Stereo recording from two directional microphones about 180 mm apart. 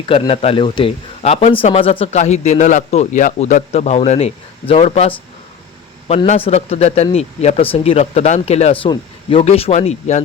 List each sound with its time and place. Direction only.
0.0 s a man's voice: 30° left (ahead or behind)